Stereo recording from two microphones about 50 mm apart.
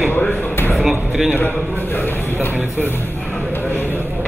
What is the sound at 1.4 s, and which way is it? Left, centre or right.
A man's voice, left.